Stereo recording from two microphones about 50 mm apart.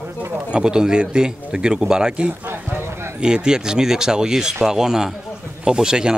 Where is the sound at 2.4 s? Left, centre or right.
Right.